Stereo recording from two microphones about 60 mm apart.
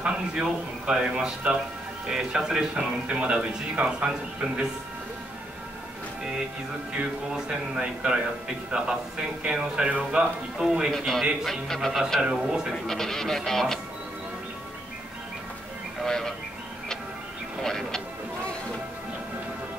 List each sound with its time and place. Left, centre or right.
0.0 s speech: centre
6.9 s speech: centre
10.9 s speech: centre
12.2 s speech: centre
12.8 s speech: centre
16.0 s music: centre
17.6 s vehicle: centre